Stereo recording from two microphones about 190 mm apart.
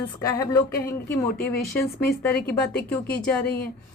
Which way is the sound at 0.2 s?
15° left (ahead or behind).